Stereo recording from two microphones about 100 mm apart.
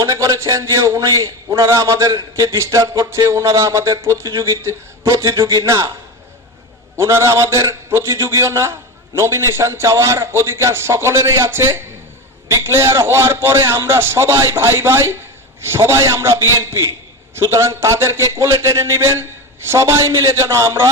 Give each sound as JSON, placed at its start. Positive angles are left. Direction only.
{"t": 0.0, "sound": "a man's voice", "side_deg": -35}
{"t": 5.4, "sound": "a man's voice", "side_deg": -45}
{"t": 5.6, "sound": "a man's voice", "side_deg": -30}
{"t": 6.9, "sound": "a man's voice", "side_deg": -30}